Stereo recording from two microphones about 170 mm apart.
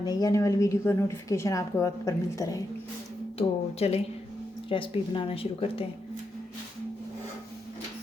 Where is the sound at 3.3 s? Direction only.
40° left (ahead or behind).